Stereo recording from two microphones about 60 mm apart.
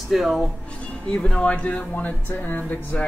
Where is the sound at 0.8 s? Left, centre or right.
Centre.